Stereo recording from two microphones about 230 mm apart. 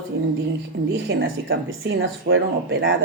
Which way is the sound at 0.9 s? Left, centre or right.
Right.